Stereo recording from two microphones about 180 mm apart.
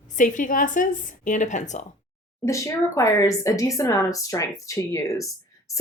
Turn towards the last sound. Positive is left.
turn(degrees=15)  # may be behind; listen again after turning